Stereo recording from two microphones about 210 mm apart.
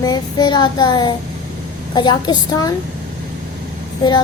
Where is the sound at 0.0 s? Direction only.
20° left (ahead or behind).